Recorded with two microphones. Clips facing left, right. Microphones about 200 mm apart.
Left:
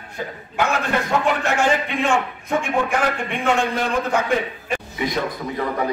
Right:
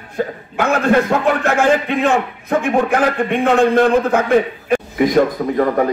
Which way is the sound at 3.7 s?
55° right (ahead or behind).